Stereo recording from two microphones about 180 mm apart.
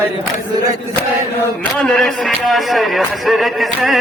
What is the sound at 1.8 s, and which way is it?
A man's voice, 5° left (ahead or behind).